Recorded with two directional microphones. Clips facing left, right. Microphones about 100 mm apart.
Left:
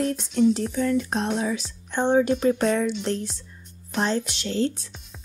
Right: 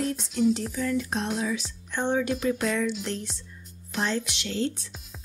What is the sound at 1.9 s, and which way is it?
A woman's voice, 30° left (ahead or behind).